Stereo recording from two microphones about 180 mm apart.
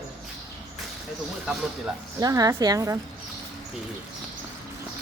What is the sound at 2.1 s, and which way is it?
Speech, 20° right (ahead or behind).